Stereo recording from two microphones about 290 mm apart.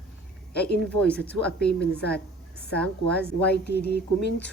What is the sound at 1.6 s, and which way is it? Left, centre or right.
Speech, left.